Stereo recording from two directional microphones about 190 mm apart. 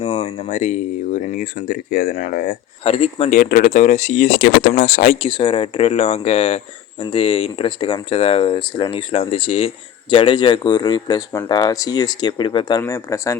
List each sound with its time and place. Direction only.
0.3 s speech: 40° left (ahead or behind)
2.8 s speech: 35° left (ahead or behind); by 13.3 s 15° left (ahead or behind)